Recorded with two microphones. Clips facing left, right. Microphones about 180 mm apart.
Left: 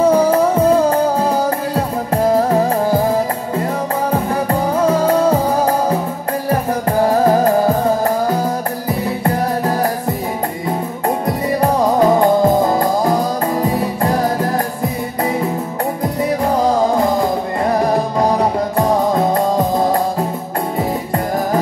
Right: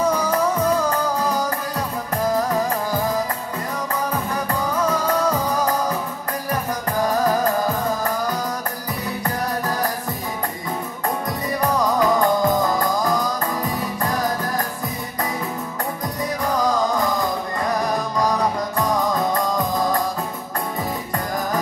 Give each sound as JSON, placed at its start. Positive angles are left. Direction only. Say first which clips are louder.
{"t": 0.0, "sound": "music", "louder": "left 8 dB", "side_deg": 30}
{"t": 11.2, "sound": "music", "louder": "left 7 dB", "side_deg": 30}
{"t": 16.0, "sound": "music", "louder": "left 9 dB", "side_deg": 30}